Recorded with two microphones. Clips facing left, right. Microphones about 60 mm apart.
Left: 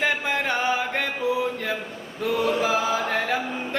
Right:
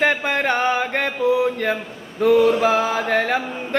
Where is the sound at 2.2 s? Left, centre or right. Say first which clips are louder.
Right 8 dB; right.